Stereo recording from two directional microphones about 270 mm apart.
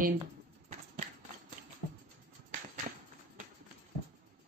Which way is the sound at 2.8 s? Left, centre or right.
Right.